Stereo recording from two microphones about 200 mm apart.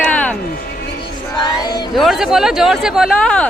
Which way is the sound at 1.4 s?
20° left (ahead or behind).